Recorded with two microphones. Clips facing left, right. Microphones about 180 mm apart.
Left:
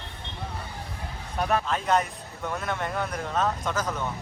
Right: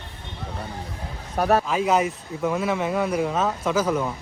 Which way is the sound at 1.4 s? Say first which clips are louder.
Right 6 dB; 40° right (ahead or behind).